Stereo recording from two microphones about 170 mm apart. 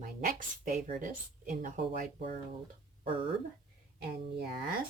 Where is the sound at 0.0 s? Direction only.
50° right (ahead or behind).